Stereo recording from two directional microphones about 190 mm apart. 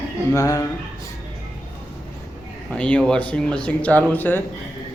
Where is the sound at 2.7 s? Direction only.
5° left (ahead or behind).